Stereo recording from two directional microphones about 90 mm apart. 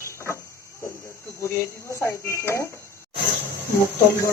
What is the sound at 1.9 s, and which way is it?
Speech, 30° left (ahead or behind).